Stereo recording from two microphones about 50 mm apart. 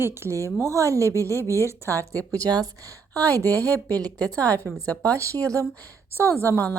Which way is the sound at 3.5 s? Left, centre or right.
Left.